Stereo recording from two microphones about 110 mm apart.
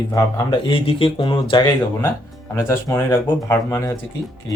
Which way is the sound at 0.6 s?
55° left (ahead or behind).